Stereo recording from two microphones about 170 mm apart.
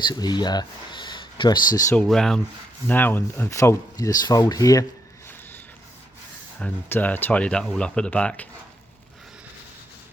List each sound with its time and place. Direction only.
0.1 s speech: 25° left (ahead or behind)
2.0 s speech: 5° left (ahead or behind); by 4.9 s 20° left (ahead or behind)
6.6 s speech: 10° left (ahead or behind)